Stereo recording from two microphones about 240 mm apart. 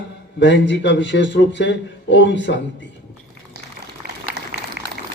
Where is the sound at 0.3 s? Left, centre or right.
Left.